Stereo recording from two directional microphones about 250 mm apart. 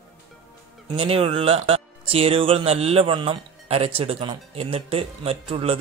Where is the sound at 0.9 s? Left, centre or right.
Right.